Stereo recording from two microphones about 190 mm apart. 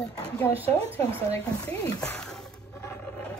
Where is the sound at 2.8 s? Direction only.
15° left (ahead or behind).